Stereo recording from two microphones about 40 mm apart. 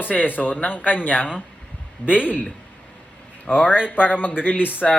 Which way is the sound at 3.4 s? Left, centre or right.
Centre.